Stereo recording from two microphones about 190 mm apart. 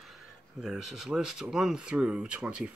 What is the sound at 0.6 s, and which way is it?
Speech, centre (ahead or behind).